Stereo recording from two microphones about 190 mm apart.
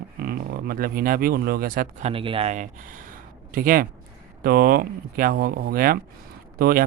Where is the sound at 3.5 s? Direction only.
50° right (ahead or behind).